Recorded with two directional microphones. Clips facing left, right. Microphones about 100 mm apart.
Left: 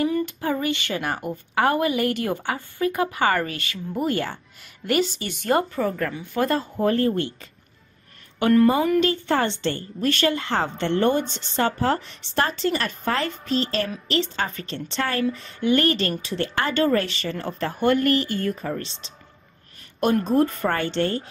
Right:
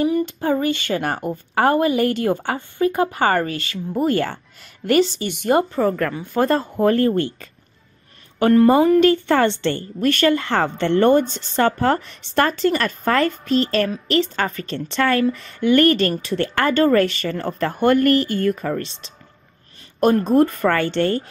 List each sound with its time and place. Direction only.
0.0 s a woman's voice: 25° right (ahead or behind)
4.1 s speech: 55° right (ahead or behind)
5.2 s speech: 20° right (ahead or behind)
6.1 s speech: 40° right (ahead or behind)
6.8 s speech: 65° right (ahead or behind)
9.0 s a woman's voice: 65° right (ahead or behind)
11.2 s speech: 5° right (ahead or behind)
11.5 s speech: 50° right (ahead or behind)
20.0 s a woman's voice: 40° right (ahead or behind)
20.3 s a woman's voice: 60° right (ahead or behind)